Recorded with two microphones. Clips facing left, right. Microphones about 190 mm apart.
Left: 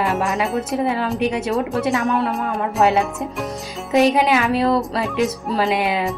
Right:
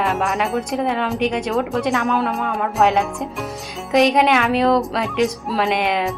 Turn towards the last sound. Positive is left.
turn(degrees=5)  # may be behind; listen again after turning